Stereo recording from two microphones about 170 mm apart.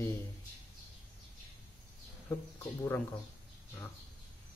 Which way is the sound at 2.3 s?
10° left (ahead or behind).